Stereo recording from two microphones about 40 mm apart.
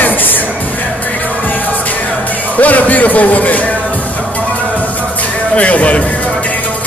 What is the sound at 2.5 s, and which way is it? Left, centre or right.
A man's voice, left.